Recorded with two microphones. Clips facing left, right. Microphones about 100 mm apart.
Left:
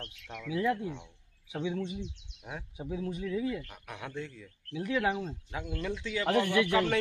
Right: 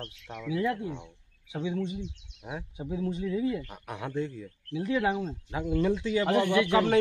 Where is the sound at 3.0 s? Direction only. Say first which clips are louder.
Right 4 dB; 20° right (ahead or behind).